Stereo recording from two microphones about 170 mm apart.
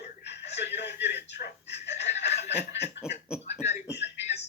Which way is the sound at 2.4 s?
40° left (ahead or behind).